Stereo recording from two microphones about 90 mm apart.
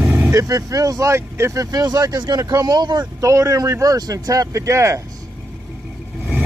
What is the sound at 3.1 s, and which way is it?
Speech, 35° right (ahead or behind).